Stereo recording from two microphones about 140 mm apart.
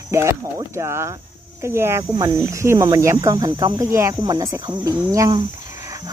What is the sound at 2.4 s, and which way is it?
Speech, 20° right (ahead or behind).